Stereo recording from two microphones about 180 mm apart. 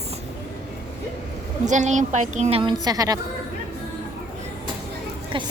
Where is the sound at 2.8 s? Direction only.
20° right (ahead or behind).